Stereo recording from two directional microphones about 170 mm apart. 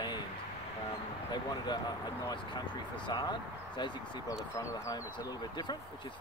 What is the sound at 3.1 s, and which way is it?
Speech, 25° left (ahead or behind).